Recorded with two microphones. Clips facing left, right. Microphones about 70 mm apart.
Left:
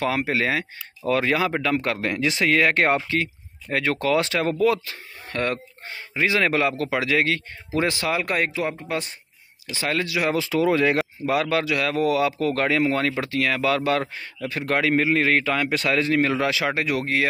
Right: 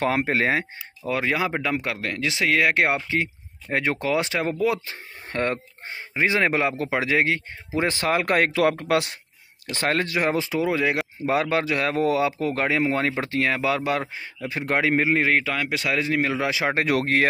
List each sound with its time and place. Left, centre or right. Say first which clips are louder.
0.0 s speech: right 1 dB; right
1.0 s speech: left 3 dB; centre
1.9 s speech: left 3 dB; centre
3.1 s speech: even; right
5.3 s speech: even; right
8.2 s speech: right 3 dB; right
8.5 s speech: right 6 dB; right
9.7 s speech: right 1 dB; right
10.7 s speech: left 4 dB; centre
11.2 s speech: right 1 dB; right
15.3 s speech: left 2 dB; centre
16.4 s speech: left 1 dB; right
16.7 s speech: right 2 dB; right